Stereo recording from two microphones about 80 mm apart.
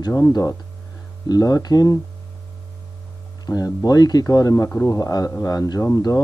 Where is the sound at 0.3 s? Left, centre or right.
Left.